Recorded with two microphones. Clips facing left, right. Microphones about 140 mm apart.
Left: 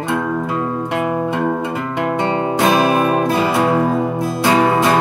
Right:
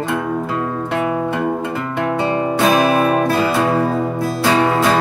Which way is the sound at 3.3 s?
20° left (ahead or behind).